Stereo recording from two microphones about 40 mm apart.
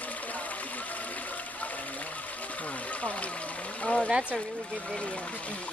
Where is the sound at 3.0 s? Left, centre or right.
Left.